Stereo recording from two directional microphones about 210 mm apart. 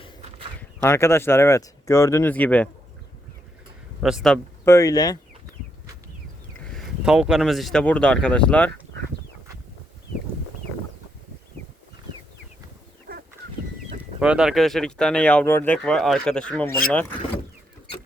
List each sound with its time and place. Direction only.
0.8 s speech: 10° left (ahead or behind)
4.0 s speech: centre (ahead or behind)
4.6 s speech: 15° left (ahead or behind)
6.7 s speech: centre (ahead or behind)
13.1 s fowl: 45° right (ahead or behind)
14.2 s speech: 5° right (ahead or behind)